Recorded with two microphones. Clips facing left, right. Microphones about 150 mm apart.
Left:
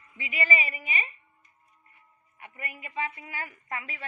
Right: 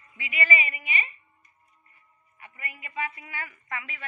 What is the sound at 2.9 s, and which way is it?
A woman's voice, 25° left (ahead or behind).